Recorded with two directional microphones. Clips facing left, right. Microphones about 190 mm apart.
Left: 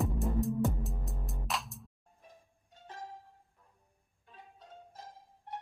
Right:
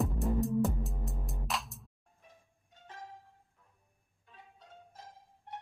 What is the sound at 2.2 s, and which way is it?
Music, 35° left (ahead or behind).